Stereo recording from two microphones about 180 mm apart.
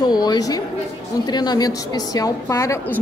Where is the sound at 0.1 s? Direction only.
20° left (ahead or behind).